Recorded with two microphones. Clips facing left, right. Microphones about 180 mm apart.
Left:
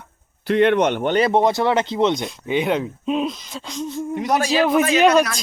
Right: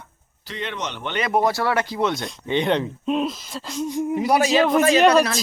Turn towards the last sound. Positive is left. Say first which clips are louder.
# even
turn(degrees=0)  # may be behind; listen again after turning